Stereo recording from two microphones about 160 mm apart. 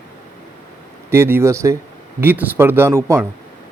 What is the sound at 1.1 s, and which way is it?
Speech, 15° right (ahead or behind).